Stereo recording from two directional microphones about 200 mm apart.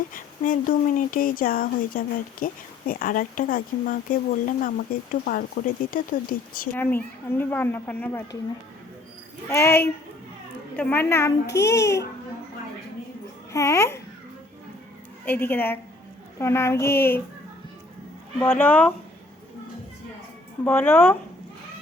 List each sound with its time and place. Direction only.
0.1 s speech: 45° left (ahead or behind)
6.7 s speech: 10° left (ahead or behind)
9.5 s speech: 15° left (ahead or behind)
13.5 s speech: 15° left (ahead or behind)
15.2 s speech: 10° left (ahead or behind)
18.3 s speech: 10° left (ahead or behind)
20.7 s speech: 10° left (ahead or behind)